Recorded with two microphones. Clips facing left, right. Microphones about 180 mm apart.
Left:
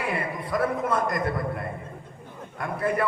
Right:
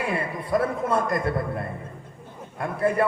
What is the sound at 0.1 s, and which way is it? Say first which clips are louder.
A man's voice: right 3 dB; 30° right (ahead or behind).